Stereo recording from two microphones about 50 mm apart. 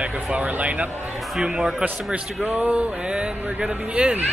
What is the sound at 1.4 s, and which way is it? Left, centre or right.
Speech, centre.